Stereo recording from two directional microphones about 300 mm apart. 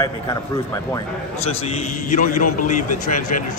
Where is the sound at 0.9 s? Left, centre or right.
Left.